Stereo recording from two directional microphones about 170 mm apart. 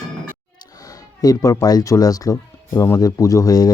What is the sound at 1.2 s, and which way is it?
Speech, 20° left (ahead or behind).